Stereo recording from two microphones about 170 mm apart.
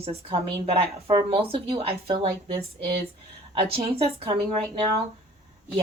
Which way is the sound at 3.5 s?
35° right (ahead or behind).